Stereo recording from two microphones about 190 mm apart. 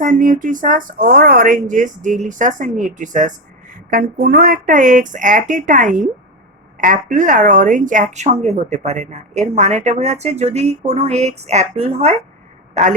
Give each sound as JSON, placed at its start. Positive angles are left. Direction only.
{"t": 0.0, "sound": "a woman's voice", "side_deg": -45}